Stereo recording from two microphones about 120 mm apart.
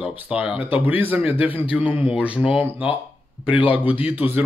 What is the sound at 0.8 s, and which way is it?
Speech, 15° right (ahead or behind).